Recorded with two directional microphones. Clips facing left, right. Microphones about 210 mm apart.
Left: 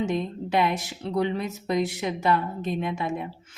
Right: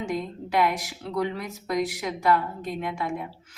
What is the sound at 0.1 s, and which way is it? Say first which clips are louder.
A woman's voice: left 2 dB; 25° left (ahead or behind).